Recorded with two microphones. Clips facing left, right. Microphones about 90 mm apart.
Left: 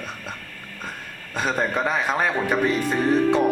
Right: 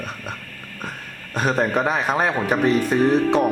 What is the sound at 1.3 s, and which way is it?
A man's voice, 5° right (ahead or behind).